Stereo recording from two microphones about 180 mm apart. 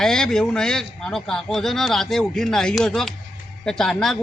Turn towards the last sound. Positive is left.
turn(degrees=5)  # may be behind; listen again after turning